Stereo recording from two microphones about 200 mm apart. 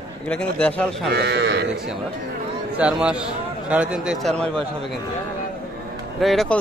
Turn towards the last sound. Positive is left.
turn(degrees=0)  # may be behind; listen again after turning